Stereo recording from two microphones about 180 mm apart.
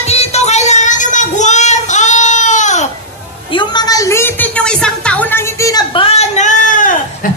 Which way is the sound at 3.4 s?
25° left (ahead or behind).